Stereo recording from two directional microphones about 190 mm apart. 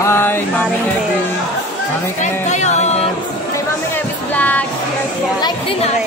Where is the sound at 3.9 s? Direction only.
10° left (ahead or behind).